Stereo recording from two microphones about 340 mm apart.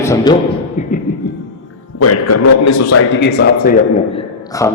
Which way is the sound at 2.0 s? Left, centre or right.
Left.